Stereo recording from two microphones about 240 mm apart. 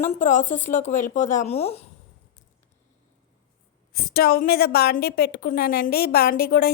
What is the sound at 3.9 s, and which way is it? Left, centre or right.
A woman's voice, left.